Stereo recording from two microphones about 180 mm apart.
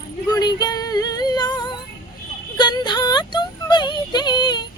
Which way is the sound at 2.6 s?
25° left (ahead or behind).